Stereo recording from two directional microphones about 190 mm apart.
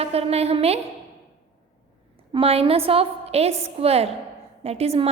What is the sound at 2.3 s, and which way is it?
A woman's voice, 30° right (ahead or behind).